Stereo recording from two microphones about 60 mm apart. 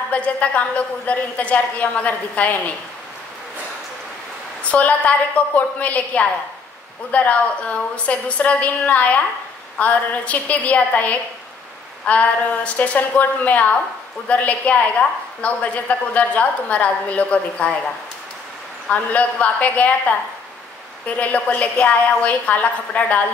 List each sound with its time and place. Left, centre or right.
0.1 s a woman's voice: left
4.6 s a woman's voice: left
18.9 s a woman's voice: left
21.2 s a woman's voice: left